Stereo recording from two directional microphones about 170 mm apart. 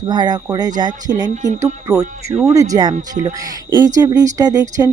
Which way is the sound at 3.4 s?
20° right (ahead or behind).